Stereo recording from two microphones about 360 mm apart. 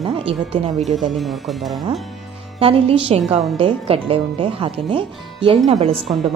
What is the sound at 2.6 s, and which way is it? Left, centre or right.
A woman's voice, centre.